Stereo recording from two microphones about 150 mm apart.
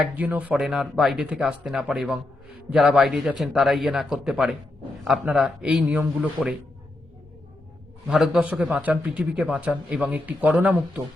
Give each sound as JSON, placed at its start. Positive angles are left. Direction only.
{"t": 0.0, "sound": "a man's voice", "side_deg": -10}
{"t": 8.0, "sound": "a man's voice", "side_deg": -5}